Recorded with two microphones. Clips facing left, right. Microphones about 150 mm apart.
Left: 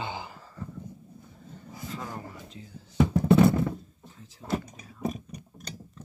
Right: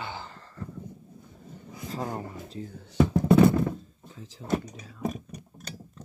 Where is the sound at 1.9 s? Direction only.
40° right (ahead or behind).